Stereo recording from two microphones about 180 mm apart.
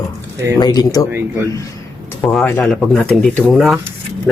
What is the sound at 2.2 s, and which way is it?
Speech, 5° left (ahead or behind).